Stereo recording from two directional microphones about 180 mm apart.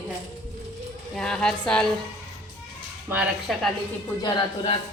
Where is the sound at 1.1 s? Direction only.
5° left (ahead or behind).